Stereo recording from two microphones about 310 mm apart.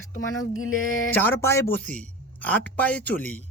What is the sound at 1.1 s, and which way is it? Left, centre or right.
Speech, centre.